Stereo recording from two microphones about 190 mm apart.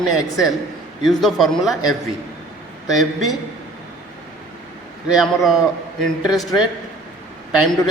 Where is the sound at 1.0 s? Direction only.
Centre (ahead or behind).